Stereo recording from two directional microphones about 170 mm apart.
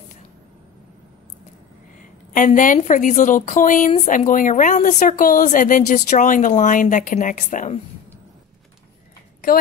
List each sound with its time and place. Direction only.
2.0 s a woman's voice: 50° left (ahead or behind)